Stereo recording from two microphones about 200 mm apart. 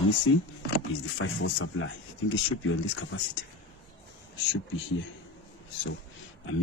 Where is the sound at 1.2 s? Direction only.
75° left (ahead or behind).